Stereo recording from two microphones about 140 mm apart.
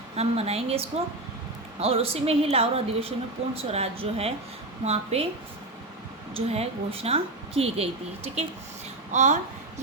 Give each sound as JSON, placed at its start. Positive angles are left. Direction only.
{"t": 0.2, "sound": "a woman's voice", "side_deg": -50}
{"t": 6.3, "sound": "a woman's voice", "side_deg": -45}
{"t": 9.1, "sound": "a woman's voice", "side_deg": -60}